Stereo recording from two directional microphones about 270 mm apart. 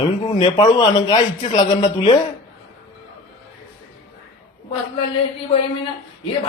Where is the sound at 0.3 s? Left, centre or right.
Centre.